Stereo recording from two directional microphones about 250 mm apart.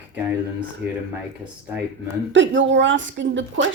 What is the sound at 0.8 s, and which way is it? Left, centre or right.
Speech, centre.